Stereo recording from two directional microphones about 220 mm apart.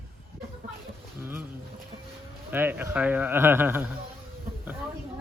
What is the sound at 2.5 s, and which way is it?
A man's voice, 10° right (ahead or behind).